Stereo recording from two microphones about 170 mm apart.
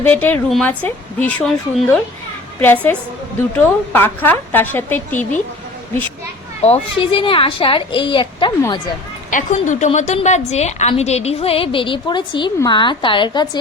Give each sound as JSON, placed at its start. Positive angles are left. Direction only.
{"t": 0.0, "sound": "a woman's voice", "side_deg": 10}
{"t": 6.6, "sound": "a woman's voice", "side_deg": 35}
{"t": 9.3, "sound": "a woman's voice", "side_deg": 45}